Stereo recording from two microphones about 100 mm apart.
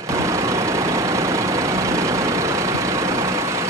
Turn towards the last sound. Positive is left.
turn(degrees=-30)  # may be behind; listen again after turning